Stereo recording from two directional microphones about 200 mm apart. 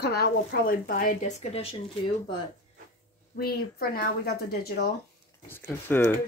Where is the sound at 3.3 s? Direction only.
50° left (ahead or behind).